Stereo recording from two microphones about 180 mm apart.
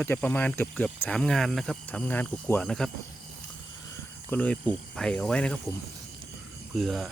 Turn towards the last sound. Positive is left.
turn(degrees=0)  # may be behind; listen again after turning